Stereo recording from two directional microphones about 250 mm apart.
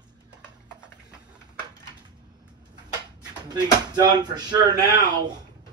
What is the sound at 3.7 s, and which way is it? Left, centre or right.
Speech, centre.